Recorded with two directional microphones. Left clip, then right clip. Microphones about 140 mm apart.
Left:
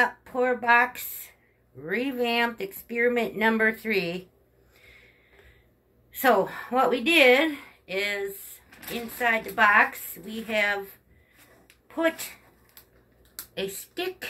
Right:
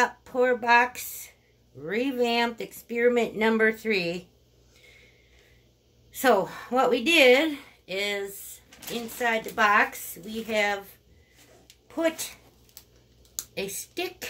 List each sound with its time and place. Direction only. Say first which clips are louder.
0.0 s speech: even; 25° right (ahead or behind)
6.1 s a woman's voice: even; 30° right (ahead or behind)
11.9 s speech: left 1 dB; 30° right (ahead or behind)
13.4 s speech: even; 30° right (ahead or behind)